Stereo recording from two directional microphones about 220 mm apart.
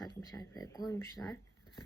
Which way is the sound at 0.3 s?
15° left (ahead or behind).